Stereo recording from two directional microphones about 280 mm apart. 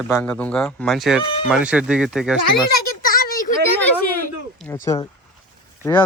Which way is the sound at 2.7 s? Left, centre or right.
Left.